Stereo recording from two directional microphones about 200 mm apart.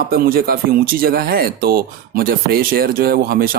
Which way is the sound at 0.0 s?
50° right (ahead or behind).